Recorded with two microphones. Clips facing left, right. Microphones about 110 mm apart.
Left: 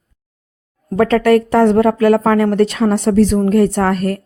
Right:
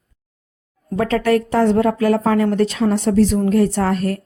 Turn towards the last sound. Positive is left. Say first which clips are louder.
# left 3 dB
turn(degrees=55)  # may be behind; listen again after turning